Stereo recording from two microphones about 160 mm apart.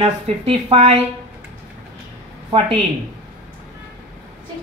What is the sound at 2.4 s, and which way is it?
Speech, 35° right (ahead or behind).